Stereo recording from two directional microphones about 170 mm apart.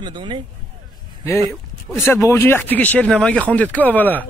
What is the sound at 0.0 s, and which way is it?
Speech, 30° right (ahead or behind).